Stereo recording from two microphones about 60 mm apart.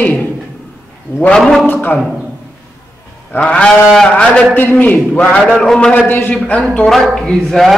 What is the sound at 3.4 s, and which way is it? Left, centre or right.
A man's voice, centre.